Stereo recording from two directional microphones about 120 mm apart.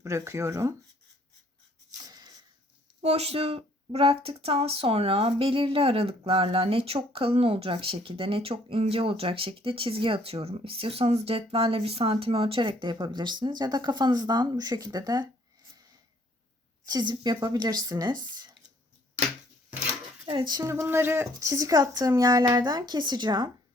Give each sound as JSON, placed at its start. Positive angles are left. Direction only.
{"t": 0.0, "sound": "a woman's voice", "side_deg": -25}
{"t": 2.0, "sound": "a sound", "side_deg": -30}
{"t": 3.0, "sound": "speech", "side_deg": -60}
{"t": 16.8, "sound": "speech", "side_deg": -35}
{"t": 20.2, "sound": "a woman's voice", "side_deg": -40}